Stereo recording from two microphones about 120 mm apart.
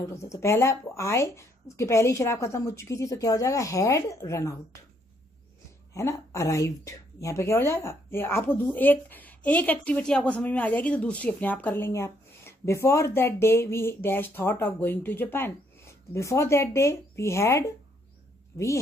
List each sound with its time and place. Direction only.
0.0 s speech: 25° left (ahead or behind)
5.9 s speech: 25° left (ahead or behind)